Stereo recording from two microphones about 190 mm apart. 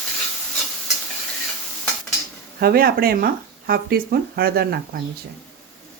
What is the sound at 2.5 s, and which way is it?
Speech, 55° right (ahead or behind).